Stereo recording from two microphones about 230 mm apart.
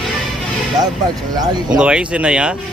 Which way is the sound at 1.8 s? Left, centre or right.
Centre.